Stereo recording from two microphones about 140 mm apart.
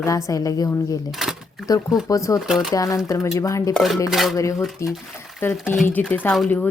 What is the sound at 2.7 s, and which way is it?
A woman's voice, 25° left (ahead or behind).